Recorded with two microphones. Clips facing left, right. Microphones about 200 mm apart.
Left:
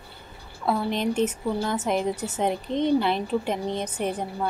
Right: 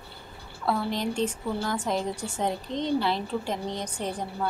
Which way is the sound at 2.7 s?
55° left (ahead or behind).